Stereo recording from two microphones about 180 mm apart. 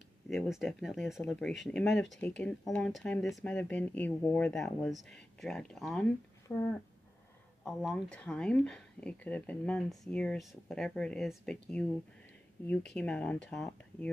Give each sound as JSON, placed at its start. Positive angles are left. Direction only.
{"t": 0.3, "sound": "speech", "side_deg": 0}
{"t": 6.5, "sound": "speech", "side_deg": 15}
{"t": 7.6, "sound": "speech", "side_deg": 0}